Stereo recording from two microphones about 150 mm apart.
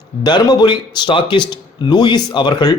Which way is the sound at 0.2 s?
30° left (ahead or behind).